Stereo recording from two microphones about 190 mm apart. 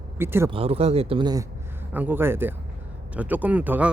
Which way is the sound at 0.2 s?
10° right (ahead or behind).